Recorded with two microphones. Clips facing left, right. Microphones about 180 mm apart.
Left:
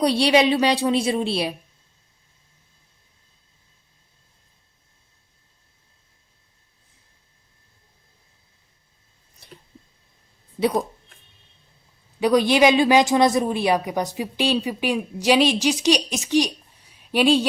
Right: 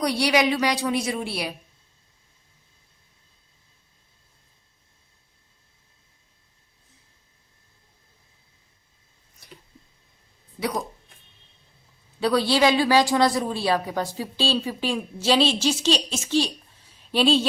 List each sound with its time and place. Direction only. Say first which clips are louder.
0.0 s a woman's voice: left 4 dB; 30° left (ahead or behind)
9.4 s squish: left 2 dB; 25° left (ahead or behind)
10.6 s a woman's voice: left 6 dB; 30° left (ahead or behind)
12.2 s a woman's voice: left 4 dB; 15° left (ahead or behind)